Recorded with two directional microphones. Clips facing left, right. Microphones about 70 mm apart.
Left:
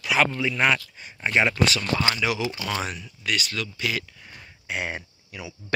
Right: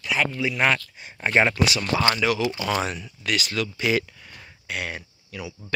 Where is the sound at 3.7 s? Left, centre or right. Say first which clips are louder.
Right 6 dB; right.